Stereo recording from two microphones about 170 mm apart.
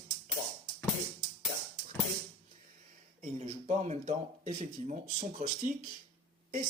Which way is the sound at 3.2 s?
45° right (ahead or behind).